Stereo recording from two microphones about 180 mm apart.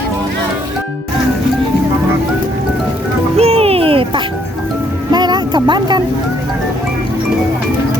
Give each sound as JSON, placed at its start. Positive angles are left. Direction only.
{"t": 3.3, "sound": "music", "side_deg": -35}
{"t": 5.1, "sound": "vehicle", "side_deg": -25}